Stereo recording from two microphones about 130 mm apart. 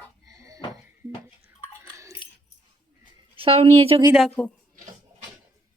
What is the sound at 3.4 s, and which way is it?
Speech, 50° right (ahead or behind).